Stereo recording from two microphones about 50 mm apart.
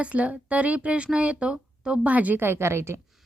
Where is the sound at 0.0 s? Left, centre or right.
Right.